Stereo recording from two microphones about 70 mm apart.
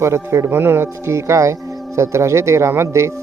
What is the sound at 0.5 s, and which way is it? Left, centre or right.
Speech, right.